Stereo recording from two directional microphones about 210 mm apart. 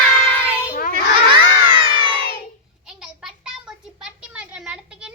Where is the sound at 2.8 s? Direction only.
5° right (ahead or behind).